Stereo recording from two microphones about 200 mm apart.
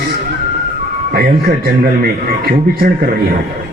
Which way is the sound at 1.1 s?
50° right (ahead or behind).